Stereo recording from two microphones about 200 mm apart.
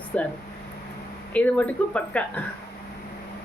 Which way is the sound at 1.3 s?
5° left (ahead or behind).